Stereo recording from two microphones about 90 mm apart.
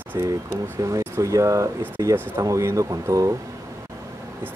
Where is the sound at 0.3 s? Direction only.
35° right (ahead or behind).